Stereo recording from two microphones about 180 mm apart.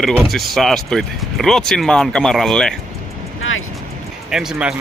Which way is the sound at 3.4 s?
90° left.